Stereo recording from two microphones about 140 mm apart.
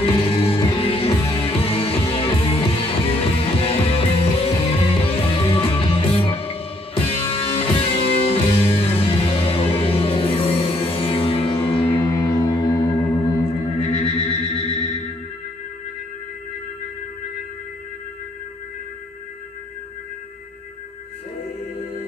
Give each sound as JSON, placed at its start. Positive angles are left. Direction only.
{"t": 0.0, "sound": "music", "side_deg": 40}
{"t": 12.1, "sound": "music", "side_deg": 30}
{"t": 13.7, "sound": "music", "side_deg": 40}